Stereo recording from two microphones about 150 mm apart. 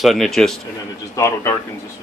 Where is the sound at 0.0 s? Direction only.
Centre (ahead or behind).